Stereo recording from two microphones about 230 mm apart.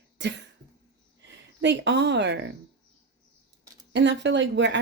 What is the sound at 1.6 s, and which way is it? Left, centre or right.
Speech, right.